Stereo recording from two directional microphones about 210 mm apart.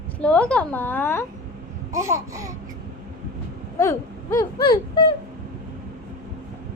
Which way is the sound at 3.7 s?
15° left (ahead or behind).